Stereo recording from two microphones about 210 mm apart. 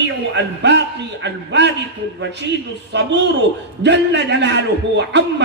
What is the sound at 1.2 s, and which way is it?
Speech, 55° right (ahead or behind).